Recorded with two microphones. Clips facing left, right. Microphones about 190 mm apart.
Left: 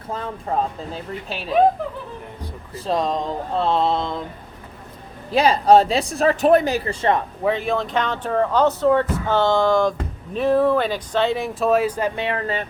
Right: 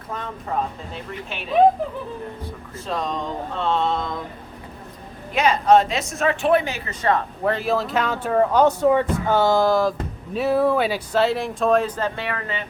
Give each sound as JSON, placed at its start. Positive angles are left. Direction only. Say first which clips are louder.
{"t": 0.1, "sound": "speech", "louder": "left 3 dB", "side_deg": 30}
{"t": 2.7, "sound": "speech", "louder": "left 5 dB", "side_deg": 35}
{"t": 5.3, "sound": "speech", "louder": "left 2 dB", "side_deg": 35}
{"t": 7.4, "sound": "speech", "louder": "even", "side_deg": 0}